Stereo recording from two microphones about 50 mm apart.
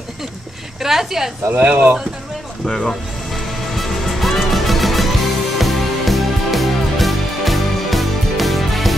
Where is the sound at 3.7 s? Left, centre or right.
Centre.